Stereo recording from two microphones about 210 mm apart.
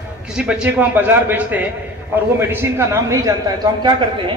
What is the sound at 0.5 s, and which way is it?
A man's voice, 5° right (ahead or behind).